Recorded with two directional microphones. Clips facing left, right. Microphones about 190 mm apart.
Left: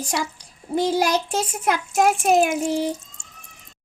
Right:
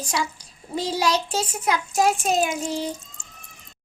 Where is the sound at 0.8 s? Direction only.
55° left (ahead or behind).